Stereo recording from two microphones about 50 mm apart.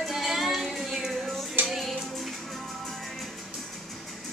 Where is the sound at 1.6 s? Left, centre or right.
Right.